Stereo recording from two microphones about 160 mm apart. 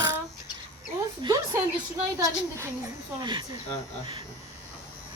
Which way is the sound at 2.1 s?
20° right (ahead or behind).